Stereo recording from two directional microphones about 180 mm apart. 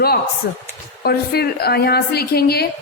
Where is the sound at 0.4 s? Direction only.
65° left (ahead or behind).